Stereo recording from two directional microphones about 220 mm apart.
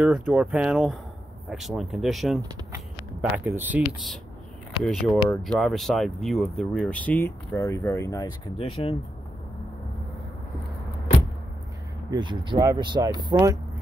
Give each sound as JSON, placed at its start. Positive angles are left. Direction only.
{"t": 0.0, "sound": "speech", "side_deg": -5}
{"t": 12.1, "sound": "speech", "side_deg": -20}